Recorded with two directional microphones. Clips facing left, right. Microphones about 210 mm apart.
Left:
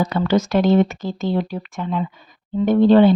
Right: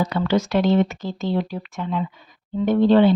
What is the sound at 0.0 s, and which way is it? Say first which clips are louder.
Speech: left 2 dB; 45° left (ahead or behind).